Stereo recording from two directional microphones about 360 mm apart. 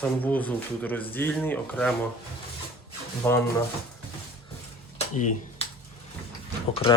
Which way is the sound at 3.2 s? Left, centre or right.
Centre.